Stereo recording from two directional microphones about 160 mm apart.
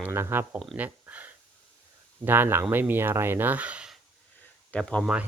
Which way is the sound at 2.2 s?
15° right (ahead or behind).